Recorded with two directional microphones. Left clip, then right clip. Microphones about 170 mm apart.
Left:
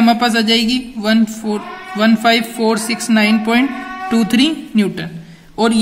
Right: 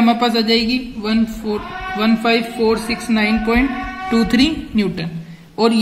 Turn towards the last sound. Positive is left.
turn(degrees=50)  # may be behind; listen again after turning